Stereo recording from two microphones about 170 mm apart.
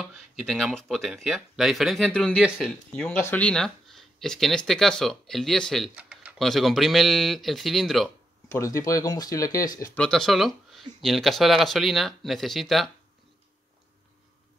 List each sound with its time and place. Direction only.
0.0 s speech: centre (ahead or behind)
8.5 s speech: 20° left (ahead or behind)
9.9 s speech: 5° left (ahead or behind)